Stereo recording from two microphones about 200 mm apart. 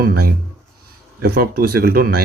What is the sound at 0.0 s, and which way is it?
Speech, 50° right (ahead or behind).